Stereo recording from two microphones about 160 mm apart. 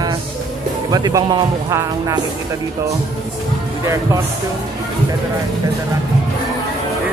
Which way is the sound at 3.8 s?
20° right (ahead or behind).